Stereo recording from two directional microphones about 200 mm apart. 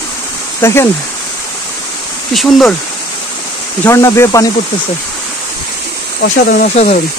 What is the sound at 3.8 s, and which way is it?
Speech, 15° left (ahead or behind).